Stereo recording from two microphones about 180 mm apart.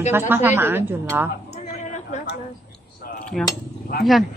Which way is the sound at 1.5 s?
40° left (ahead or behind).